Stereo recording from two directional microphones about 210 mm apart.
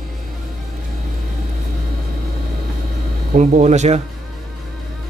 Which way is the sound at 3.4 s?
35° right (ahead or behind).